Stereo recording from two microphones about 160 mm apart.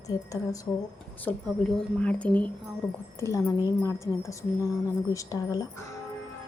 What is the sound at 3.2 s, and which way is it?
Speech, 20° left (ahead or behind).